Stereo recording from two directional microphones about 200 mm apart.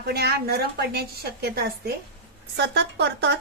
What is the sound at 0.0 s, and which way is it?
A woman's voice, 55° right (ahead or behind).